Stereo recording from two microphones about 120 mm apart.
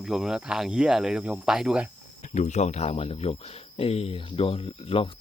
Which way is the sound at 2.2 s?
75° left (ahead or behind).